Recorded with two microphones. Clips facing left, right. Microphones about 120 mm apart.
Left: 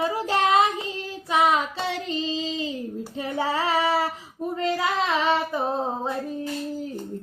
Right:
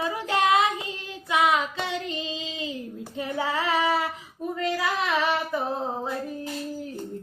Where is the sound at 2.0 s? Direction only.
35° left (ahead or behind).